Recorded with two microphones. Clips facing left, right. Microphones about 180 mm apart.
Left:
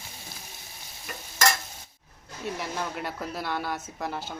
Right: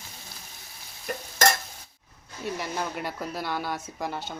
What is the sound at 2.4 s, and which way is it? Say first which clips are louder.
A woman's voice: right 1 dB; centre (ahead or behind).